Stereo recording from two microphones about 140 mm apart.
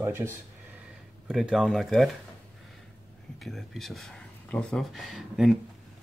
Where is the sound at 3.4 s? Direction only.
Centre (ahead or behind).